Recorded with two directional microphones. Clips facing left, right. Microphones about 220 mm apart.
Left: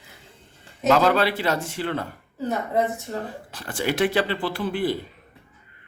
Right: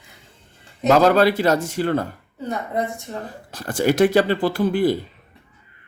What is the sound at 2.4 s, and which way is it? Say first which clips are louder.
Speech: left 1 dB; centre (ahead or behind).